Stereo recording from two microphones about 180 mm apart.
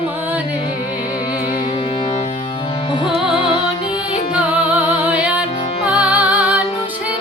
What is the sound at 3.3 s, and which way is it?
Music, 25° left (ahead or behind).